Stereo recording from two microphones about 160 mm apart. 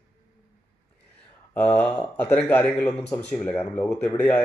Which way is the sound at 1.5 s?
5° left (ahead or behind).